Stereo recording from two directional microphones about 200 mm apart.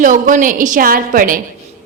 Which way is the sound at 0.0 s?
40° right (ahead or behind).